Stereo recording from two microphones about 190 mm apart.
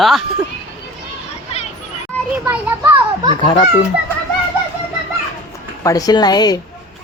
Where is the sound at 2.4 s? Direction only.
10° right (ahead or behind).